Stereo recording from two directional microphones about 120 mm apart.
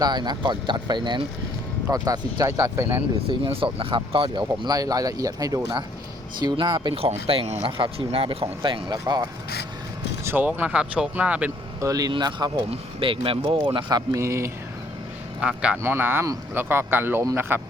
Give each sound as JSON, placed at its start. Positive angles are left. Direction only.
{"t": 0.0, "sound": "speech", "side_deg": -35}
{"t": 3.2, "sound": "speech", "side_deg": -50}
{"t": 7.0, "sound": "speech", "side_deg": -55}
{"t": 7.6, "sound": "speech", "side_deg": -50}
{"t": 10.2, "sound": "speech", "side_deg": -15}
{"t": 11.8, "sound": "speech", "side_deg": -30}
{"t": 15.4, "sound": "speech", "side_deg": -10}